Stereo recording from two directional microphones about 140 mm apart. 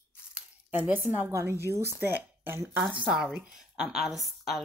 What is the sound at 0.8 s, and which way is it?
A woman's voice, 10° right (ahead or behind).